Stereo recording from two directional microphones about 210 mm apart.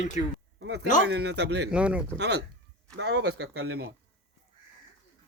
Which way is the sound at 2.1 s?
55° right (ahead or behind).